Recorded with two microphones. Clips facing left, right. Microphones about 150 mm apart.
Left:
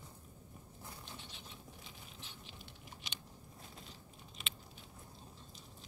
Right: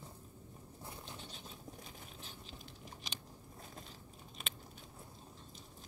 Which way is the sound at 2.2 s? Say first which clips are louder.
Right 2 dB; 40° right (ahead or behind).